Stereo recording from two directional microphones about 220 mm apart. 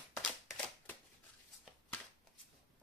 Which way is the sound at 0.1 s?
Centre (ahead or behind).